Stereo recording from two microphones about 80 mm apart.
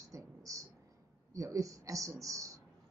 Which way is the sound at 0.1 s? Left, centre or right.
Right.